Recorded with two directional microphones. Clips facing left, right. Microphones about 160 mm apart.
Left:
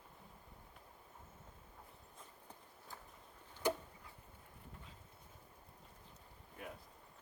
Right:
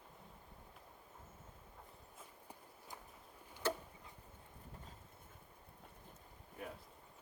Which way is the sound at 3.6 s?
15° left (ahead or behind).